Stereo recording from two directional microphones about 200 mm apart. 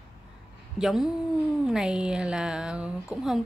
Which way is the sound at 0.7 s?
Centre (ahead or behind).